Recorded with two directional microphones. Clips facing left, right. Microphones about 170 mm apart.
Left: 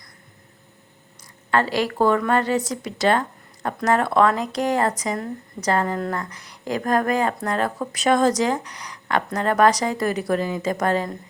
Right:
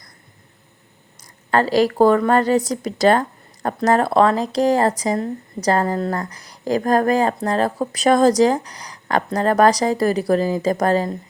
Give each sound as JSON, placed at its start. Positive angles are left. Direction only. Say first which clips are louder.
{"t": 1.5, "sound": "speech", "louder": "right 5 dB", "side_deg": -40}